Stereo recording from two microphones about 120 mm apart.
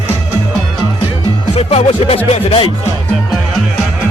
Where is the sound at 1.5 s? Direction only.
55° left (ahead or behind).